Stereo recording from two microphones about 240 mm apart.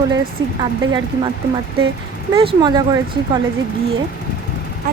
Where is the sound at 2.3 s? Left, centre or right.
Right.